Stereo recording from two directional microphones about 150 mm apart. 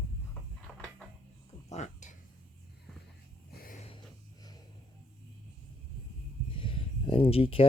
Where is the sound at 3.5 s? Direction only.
85° left.